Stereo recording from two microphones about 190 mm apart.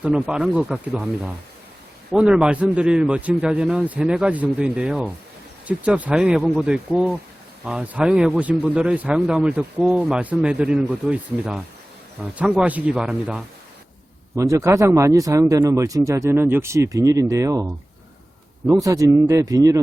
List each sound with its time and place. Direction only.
0.0 s speech: 5° right (ahead or behind)
14.3 s speech: 15° right (ahead or behind)
18.7 s speech: 15° right (ahead or behind)